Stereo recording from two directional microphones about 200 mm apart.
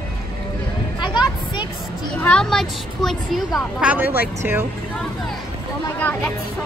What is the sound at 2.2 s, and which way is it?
Speech, 5° left (ahead or behind).